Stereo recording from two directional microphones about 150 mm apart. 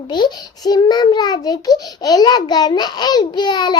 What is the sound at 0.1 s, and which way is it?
A child's voice, 30° left (ahead or behind).